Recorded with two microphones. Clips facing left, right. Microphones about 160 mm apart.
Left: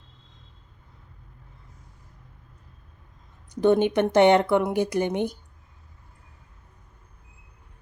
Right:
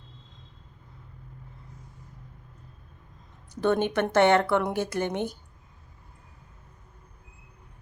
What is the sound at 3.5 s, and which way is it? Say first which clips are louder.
Speech: left 5 dB; 15° left (ahead or behind).